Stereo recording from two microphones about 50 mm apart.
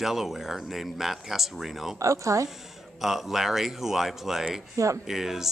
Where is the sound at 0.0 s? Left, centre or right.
Centre.